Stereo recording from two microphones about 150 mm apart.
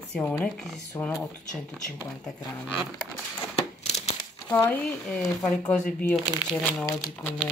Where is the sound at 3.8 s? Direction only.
45° left (ahead or behind).